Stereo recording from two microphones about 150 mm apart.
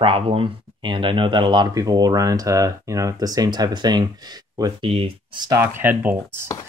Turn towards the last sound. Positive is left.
turn(degrees=-15)  # may be behind; listen again after turning